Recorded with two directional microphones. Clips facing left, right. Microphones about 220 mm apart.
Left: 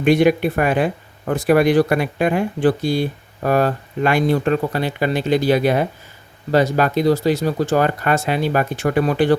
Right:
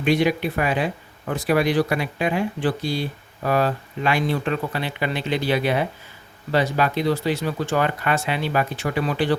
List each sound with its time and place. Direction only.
0.0 s speech: 50° left (ahead or behind)